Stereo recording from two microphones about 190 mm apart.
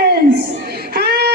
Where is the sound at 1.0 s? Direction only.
55° right (ahead or behind).